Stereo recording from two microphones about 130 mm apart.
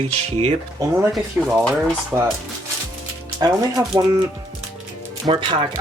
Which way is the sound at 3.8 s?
20° right (ahead or behind).